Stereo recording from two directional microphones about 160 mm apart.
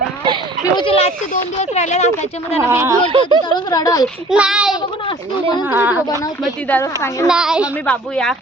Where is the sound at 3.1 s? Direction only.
30° right (ahead or behind).